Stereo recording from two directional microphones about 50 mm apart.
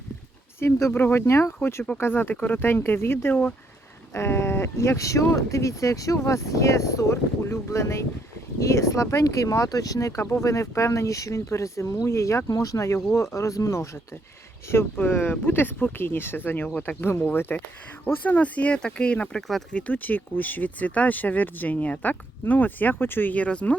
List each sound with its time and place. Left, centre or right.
0.6 s speech: left
0.9 s speech: left
1.2 s speech: left
2.0 s speech: left
2.3 s speech: left
2.6 s speech: left
8.5 s speech: left
14.9 s speech: left
18.8 s speech: centre
19.4 s speech: centre
19.9 s speech: left
23.3 s speech: left